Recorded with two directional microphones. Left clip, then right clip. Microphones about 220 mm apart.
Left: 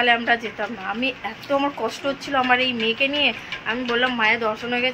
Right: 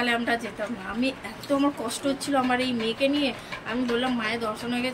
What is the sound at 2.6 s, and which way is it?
Speech, 20° left (ahead or behind).